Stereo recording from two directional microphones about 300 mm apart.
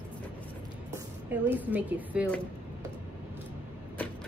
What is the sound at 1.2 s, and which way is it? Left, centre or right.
A woman's voice, centre.